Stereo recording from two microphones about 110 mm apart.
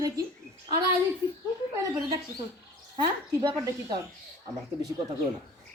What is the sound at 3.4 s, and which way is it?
Speech, 45° right (ahead or behind).